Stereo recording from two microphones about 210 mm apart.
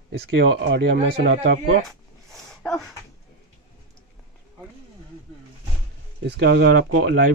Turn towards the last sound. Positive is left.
turn(degrees=-60)  # may be behind; listen again after turning